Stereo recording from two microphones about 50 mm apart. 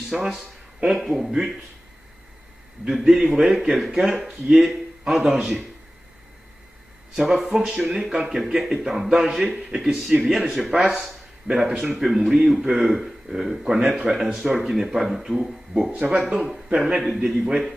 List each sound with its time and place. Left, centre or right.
0.1 s a man's voice: centre
2.9 s a man's voice: centre
7.2 s a man's voice: centre
9.6 s speech: centre
9.9 s a man's voice: centre
16.3 s speech: centre